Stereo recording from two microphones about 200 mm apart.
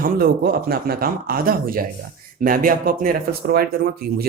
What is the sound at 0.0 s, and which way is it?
Speech, 50° right (ahead or behind).